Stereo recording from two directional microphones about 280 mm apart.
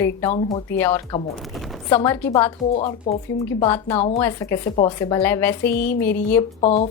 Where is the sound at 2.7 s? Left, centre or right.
Left.